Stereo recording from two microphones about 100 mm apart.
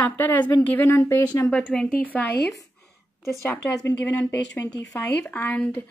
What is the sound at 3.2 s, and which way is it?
Speech, 30° left (ahead or behind).